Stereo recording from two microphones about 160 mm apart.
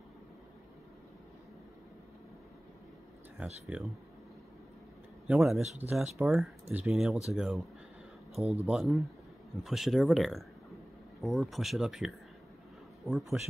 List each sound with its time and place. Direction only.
3.3 s speech: 5° right (ahead or behind)
5.3 s speech: centre (ahead or behind)
8.6 s speech: centre (ahead or behind)